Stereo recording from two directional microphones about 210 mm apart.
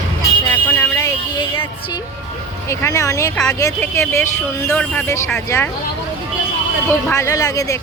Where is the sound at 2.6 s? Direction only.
15° left (ahead or behind).